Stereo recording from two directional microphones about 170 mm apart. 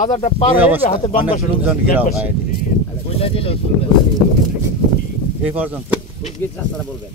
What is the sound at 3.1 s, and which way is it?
Speech, 35° left (ahead or behind).